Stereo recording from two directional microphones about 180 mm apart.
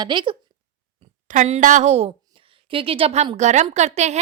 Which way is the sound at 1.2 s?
40° right (ahead or behind).